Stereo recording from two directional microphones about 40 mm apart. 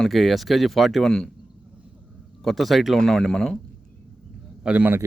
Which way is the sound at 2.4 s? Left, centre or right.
Centre.